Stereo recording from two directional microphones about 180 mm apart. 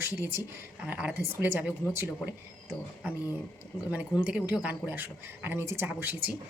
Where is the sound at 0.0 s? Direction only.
10° right (ahead or behind).